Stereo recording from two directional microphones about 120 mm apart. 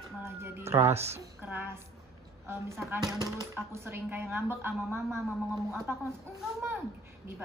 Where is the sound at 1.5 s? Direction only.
15° right (ahead or behind).